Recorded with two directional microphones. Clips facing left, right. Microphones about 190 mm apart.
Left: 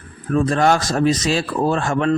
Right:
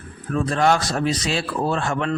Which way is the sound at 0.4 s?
45° left (ahead or behind).